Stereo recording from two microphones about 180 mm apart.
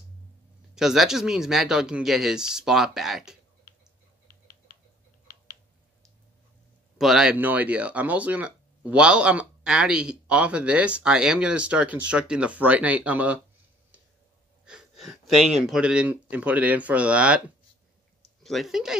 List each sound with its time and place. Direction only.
0.7 s speech: centre (ahead or behind)
4.3 s typing: 50° left (ahead or behind)
7.0 s speech: centre (ahead or behind)
14.6 s speech: 5° right (ahead or behind)
18.4 s speech: centre (ahead or behind)